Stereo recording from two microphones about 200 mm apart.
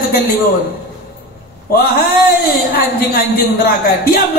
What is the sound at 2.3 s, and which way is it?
A woman's voice, 45° left (ahead or behind).